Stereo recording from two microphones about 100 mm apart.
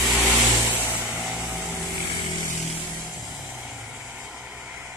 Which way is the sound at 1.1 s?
5° right (ahead or behind).